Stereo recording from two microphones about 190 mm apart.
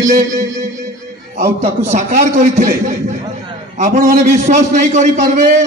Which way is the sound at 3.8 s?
40° right (ahead or behind).